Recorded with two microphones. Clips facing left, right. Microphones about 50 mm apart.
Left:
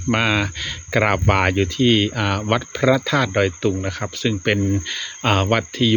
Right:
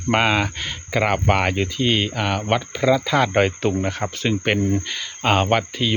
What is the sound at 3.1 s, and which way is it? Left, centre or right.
Speech, right.